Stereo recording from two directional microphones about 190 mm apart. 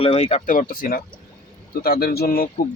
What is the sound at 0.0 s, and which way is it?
Speech, 30° left (ahead or behind).